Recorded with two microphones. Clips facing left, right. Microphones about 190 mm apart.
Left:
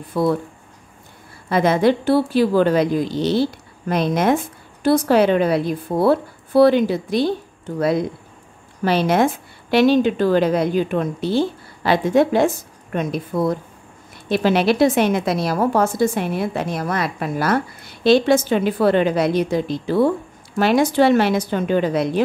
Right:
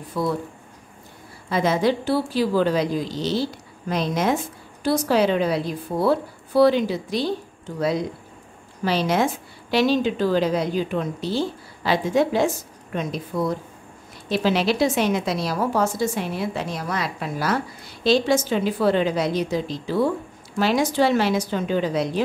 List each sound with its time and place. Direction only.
0.2 s a woman's voice: 60° left (ahead or behind)
1.5 s a woman's voice: 60° left (ahead or behind)
8.8 s a woman's voice: 55° left (ahead or behind)